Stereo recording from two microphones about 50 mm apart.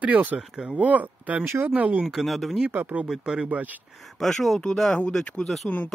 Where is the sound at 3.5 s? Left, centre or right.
Right.